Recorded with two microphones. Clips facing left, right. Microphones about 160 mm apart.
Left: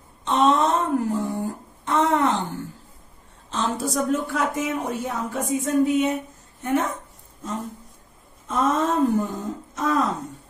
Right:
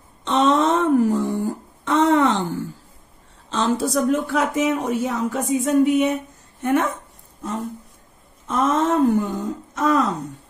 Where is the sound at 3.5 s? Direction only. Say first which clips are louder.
Right 4 dB; 90° right.